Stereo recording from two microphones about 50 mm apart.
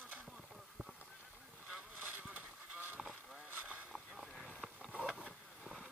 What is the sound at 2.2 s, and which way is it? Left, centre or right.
Vehicle, right.